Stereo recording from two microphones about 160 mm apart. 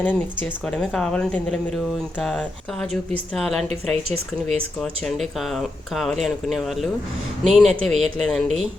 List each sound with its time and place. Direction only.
0.0 s speech: 10° left (ahead or behind)
3.7 s a woman's voice: 40° right (ahead or behind)
4.8 s speech: centre (ahead or behind)